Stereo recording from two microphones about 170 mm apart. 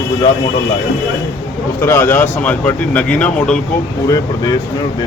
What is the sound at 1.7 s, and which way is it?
A man's voice, 15° left (ahead or behind).